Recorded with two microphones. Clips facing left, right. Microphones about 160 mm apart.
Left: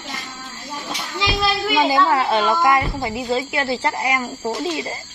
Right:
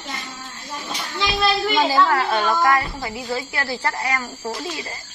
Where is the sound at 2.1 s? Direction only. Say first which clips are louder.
Left 2 dB; 20° left (ahead or behind).